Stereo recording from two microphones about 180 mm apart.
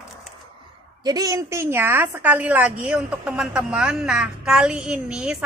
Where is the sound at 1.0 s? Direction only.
20° right (ahead or behind).